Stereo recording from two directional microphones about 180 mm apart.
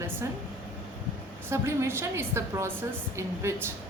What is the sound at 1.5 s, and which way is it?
A woman's voice, 15° right (ahead or behind).